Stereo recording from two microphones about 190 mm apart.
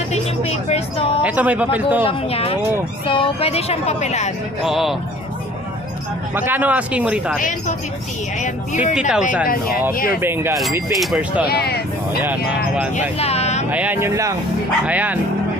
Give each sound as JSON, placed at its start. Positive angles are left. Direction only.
{"t": 0.1, "sound": "vehicle", "side_deg": 35}
{"t": 1.2, "sound": "speech", "side_deg": -10}
{"t": 2.0, "sound": "speech", "side_deg": 30}
{"t": 4.6, "sound": "speech", "side_deg": 0}
{"t": 6.3, "sound": "speech", "side_deg": -10}
{"t": 7.3, "sound": "speech", "side_deg": 45}
{"t": 9.0, "sound": "speech", "side_deg": -5}
{"t": 9.9, "sound": "speech", "side_deg": 50}
{"t": 10.2, "sound": "speech", "side_deg": -10}
{"t": 11.4, "sound": "speech", "side_deg": 60}
{"t": 12.2, "sound": "speech", "side_deg": -10}
{"t": 13.0, "sound": "speech", "side_deg": 35}
{"t": 13.7, "sound": "speech", "side_deg": -10}